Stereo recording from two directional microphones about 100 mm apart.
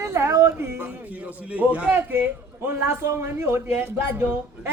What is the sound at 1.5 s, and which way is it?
A man's voice, 15° right (ahead or behind).